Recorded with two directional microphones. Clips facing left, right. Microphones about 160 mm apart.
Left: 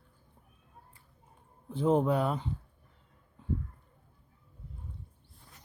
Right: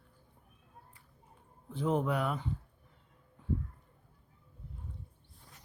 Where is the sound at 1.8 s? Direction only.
30° left (ahead or behind).